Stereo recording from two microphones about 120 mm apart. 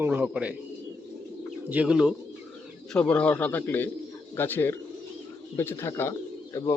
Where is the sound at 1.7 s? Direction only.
10° right (ahead or behind).